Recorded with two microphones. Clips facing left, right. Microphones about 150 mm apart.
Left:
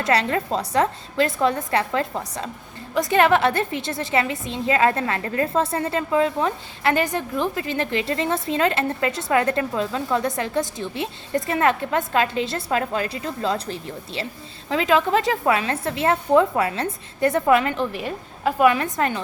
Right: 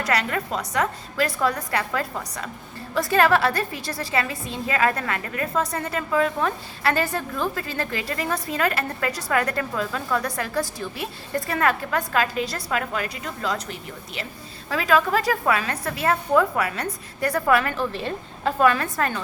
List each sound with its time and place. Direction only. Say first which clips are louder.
0.0 s a woman's voice: left 3 dB; 30° left (ahead or behind)